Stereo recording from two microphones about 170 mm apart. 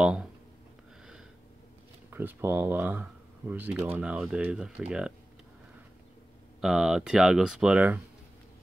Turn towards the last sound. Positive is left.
turn(degrees=-5)  # may be behind; listen again after turning